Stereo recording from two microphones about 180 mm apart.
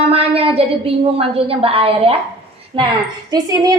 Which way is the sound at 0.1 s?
35° right (ahead or behind).